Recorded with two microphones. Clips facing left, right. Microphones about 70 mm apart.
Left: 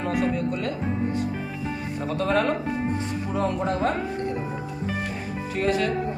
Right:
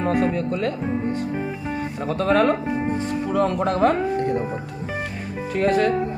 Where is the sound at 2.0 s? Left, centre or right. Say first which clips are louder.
Right 5 dB; right.